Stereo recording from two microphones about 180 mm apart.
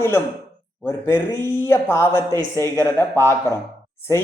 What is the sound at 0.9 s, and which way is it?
A man's voice, 15° left (ahead or behind).